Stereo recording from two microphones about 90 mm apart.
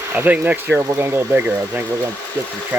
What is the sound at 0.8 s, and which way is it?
Speech, 30° right (ahead or behind).